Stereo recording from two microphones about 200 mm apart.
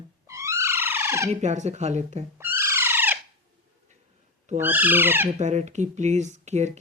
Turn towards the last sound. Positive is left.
turn(degrees=-35)  # may be behind; listen again after turning